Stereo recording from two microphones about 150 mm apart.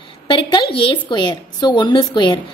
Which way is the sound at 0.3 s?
35° left (ahead or behind).